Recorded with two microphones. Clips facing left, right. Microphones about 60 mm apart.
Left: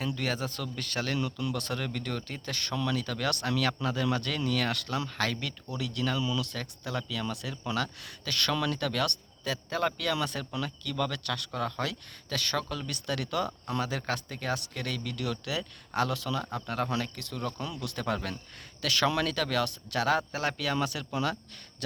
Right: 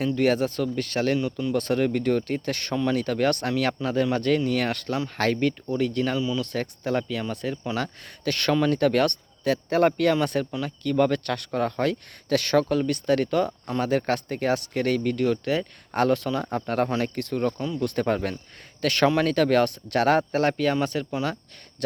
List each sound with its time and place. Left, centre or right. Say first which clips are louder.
0.0 s speech: right 10 dB; right
1.5 s speech: right 11 dB; right
6.1 s speech: right 5 dB; right
6.4 s speech: right 9 dB; right
7.2 s speech: right 6 dB; right
7.8 s speech: right 3 dB; right
10.8 s speech: right 12 dB; right
19.0 s speech: right 9 dB; right
21.8 s a sound: right 10 dB; right